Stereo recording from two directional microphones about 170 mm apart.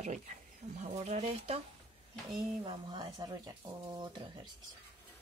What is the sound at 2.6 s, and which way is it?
Speech, 25° right (ahead or behind).